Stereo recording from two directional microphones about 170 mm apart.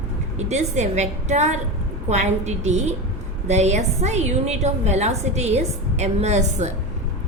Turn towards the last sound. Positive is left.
turn(degrees=-40)  # may be behind; listen again after turning